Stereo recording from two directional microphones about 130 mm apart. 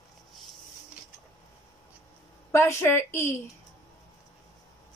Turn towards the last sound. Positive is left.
turn(degrees=20)  # may be behind; listen again after turning